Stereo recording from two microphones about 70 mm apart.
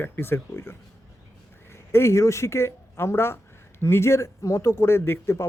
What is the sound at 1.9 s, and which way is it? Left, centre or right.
A man's voice, left.